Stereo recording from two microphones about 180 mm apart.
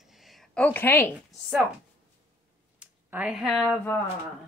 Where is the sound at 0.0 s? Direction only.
Centre (ahead or behind).